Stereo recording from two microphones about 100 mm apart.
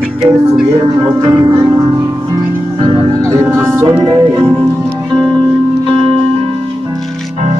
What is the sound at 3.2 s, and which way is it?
Music, 25° right (ahead or behind).